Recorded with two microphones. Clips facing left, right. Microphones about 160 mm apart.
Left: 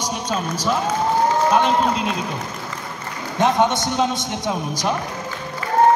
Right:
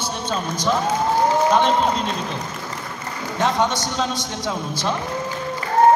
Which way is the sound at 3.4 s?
20° left (ahead or behind).